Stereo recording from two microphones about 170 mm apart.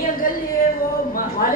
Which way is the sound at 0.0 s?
55° left (ahead or behind).